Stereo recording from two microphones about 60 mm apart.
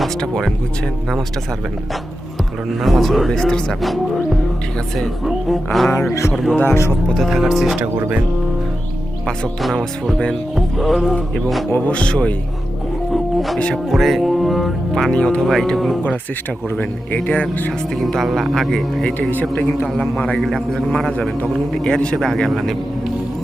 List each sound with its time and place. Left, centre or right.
2.8 s speech: centre
6.7 s speech: left
7.1 s speech: centre
9.6 s speech: centre
11.9 s speech: centre
13.9 s speech: centre
15.1 s speech: centre
15.7 s speech: centre
17.2 s speech: centre
17.7 s speech: centre
19.3 s a man's voice: left
20.0 s speech: left
20.3 s speech: centre
21.8 s speech: centre